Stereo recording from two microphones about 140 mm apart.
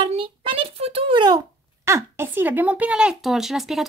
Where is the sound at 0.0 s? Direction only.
45° right (ahead or behind).